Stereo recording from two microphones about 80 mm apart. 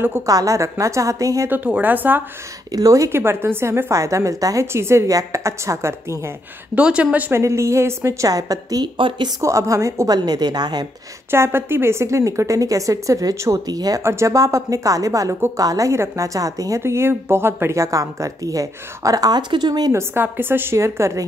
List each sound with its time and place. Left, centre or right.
0.3 s a woman's voice: right
1.5 s speech: right
2.7 s a woman's voice: right
3.2 s a woman's voice: right
6.7 s speech: centre
7.3 s a woman's voice: right
8.8 s speech: right
9.4 s a woman's voice: right
11.2 s a woman's voice: right
14.0 s a woman's voice: right
19.5 s a woman's voice: right
19.9 s a woman's voice: right